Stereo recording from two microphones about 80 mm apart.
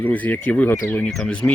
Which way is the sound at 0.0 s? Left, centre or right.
Left.